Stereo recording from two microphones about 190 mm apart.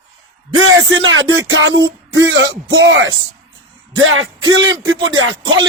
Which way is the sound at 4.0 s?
90° right.